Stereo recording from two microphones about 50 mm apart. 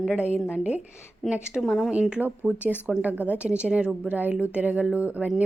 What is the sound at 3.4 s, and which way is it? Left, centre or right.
Speech, right.